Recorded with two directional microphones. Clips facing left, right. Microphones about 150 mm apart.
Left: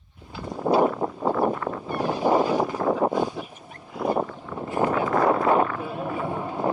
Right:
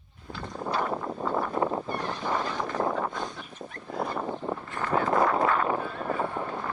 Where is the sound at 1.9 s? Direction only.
10° left (ahead or behind).